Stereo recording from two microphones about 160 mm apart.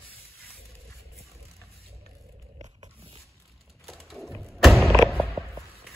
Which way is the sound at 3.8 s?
Centre (ahead or behind).